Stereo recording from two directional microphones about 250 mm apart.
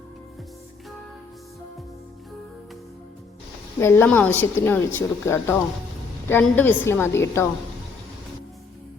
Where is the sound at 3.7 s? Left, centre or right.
Centre.